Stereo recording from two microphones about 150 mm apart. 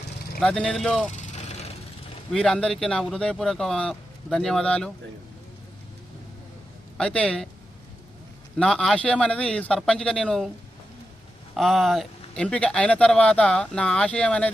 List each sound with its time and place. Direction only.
0.3 s speech: 5° left (ahead or behind)
1.1 s vehicle: 50° left (ahead or behind)
2.3 s speech: 5° left (ahead or behind)
6.9 s speech: 5° left (ahead or behind)
8.5 s speech: 5° left (ahead or behind)
11.5 s speech: centre (ahead or behind)